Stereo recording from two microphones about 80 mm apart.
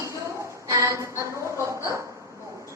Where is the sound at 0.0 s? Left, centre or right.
Right.